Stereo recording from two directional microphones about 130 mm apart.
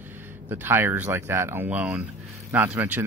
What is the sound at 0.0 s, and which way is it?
Speech, 15° right (ahead or behind).